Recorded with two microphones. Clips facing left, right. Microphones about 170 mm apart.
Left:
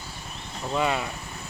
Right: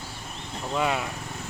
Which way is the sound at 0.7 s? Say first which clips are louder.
Left 1 dB; centre (ahead or behind).